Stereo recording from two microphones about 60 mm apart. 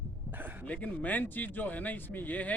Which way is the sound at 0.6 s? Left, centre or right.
Left.